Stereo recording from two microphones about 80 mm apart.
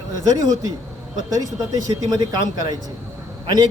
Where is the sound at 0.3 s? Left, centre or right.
Right.